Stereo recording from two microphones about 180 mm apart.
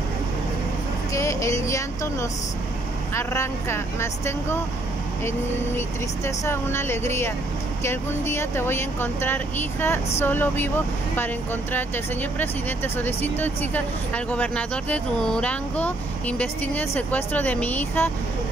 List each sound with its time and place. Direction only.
1.1 s speech: 15° left (ahead or behind)
5.8 s speech: 15° left (ahead or behind)
11.7 s speech: 10° left (ahead or behind)